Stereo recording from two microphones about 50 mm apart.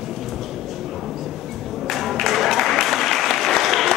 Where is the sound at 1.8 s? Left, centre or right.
Centre.